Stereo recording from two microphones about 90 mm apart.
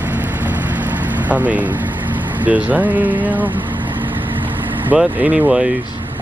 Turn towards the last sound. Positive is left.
turn(degrees=-10)  # may be behind; listen again after turning